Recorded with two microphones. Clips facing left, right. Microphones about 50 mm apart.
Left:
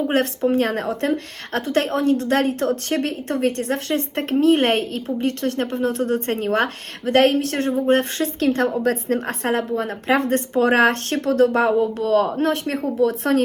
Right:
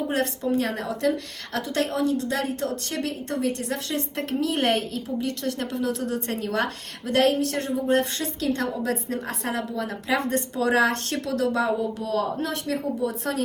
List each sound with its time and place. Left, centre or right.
0.1 s a woman's voice: left
13.0 s a woman's voice: left